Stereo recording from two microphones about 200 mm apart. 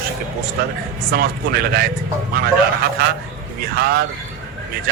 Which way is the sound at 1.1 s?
50° right (ahead or behind).